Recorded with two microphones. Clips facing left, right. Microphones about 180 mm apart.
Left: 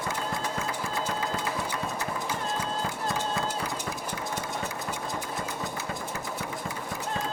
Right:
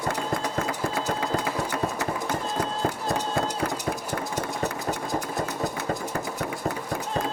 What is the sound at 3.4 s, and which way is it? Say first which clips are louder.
Run: right 4 dB; 55° right (ahead or behind).